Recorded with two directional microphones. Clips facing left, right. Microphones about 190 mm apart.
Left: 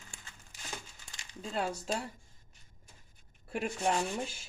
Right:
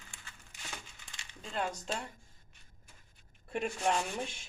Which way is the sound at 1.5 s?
5° left (ahead or behind).